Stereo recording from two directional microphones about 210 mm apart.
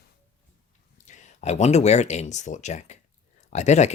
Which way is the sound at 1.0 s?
35° left (ahead or behind).